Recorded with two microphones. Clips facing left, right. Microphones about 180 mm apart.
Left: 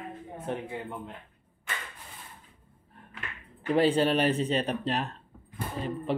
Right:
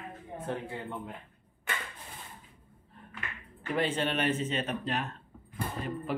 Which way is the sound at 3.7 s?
35° left (ahead or behind).